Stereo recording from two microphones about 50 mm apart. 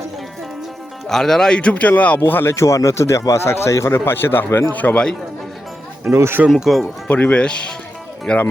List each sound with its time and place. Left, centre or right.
1.0 s speech: centre
1.7 s speech: left
4.4 s speech: left
4.7 s a man's voice: left
6.1 s speech: right
6.7 s speech: centre
7.1 s speech: left